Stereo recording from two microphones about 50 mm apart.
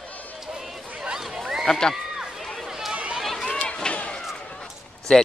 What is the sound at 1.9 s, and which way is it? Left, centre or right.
Run, centre.